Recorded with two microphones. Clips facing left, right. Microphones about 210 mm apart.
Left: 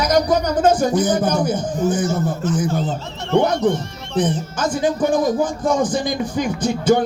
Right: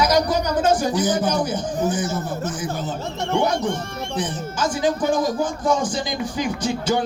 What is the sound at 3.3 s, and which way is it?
Speech, 55° left (ahead or behind).